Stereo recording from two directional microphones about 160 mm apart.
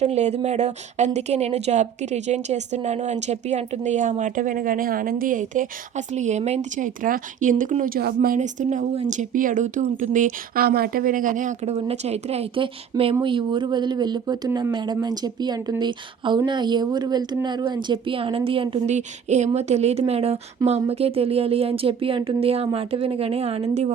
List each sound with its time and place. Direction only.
0.0 s speech: 45° right (ahead or behind); by 8.4 s 70° right (ahead or behind)
8.4 s speech: 50° right (ahead or behind); by 18.9 s 35° right (ahead or behind)
18.9 s speech: 45° right (ahead or behind)